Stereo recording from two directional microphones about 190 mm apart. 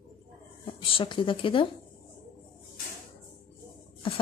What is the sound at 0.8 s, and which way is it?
Speech, 30° left (ahead or behind).